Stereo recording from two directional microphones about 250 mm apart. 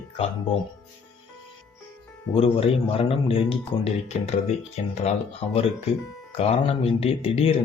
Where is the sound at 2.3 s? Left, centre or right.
Left.